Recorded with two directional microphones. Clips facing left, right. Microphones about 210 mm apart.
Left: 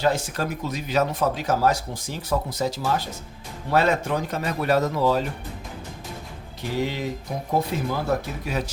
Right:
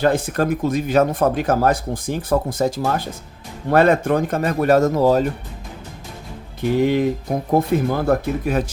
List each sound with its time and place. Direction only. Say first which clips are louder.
0.0 s speech: right 6 dB; 55° right (ahead or behind)
6.6 s speech: right 10 dB; 55° right (ahead or behind)